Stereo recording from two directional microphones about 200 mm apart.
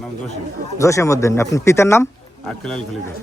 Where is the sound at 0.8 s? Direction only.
15° left (ahead or behind).